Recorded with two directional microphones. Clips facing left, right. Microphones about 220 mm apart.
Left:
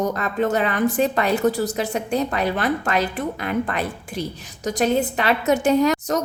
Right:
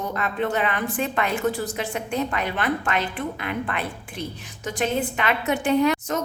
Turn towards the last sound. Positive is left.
turn(degrees=40)  # may be behind; listen again after turning